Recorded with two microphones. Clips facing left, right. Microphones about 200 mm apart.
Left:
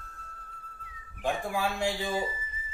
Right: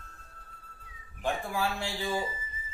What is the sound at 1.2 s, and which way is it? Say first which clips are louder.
Speech: left 1 dB; 15° left (ahead or behind).